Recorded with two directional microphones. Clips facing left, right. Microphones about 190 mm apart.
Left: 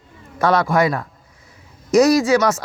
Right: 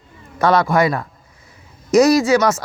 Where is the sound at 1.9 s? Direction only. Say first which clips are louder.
Right 1 dB; 5° right (ahead or behind).